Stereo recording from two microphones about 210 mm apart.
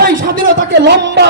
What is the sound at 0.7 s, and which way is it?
Speech, 55° right (ahead or behind).